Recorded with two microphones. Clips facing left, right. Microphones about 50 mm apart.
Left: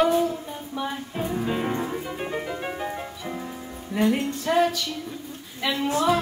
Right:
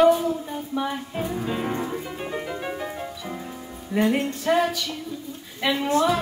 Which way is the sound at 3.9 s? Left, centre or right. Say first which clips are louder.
Right 1 dB; centre.